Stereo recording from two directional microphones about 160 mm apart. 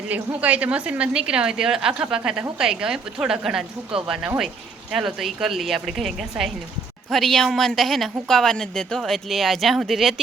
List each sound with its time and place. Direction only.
0.1 s a woman's voice: 10° right (ahead or behind)